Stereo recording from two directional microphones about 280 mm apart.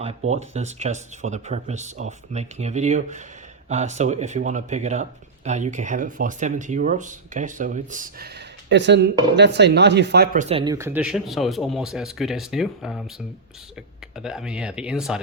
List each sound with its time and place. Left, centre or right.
0.3 s speech: right
8.7 s speech: right
10.5 s speech: centre
14.2 s speech: centre